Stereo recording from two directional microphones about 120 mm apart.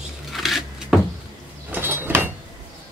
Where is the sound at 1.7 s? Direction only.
15° right (ahead or behind).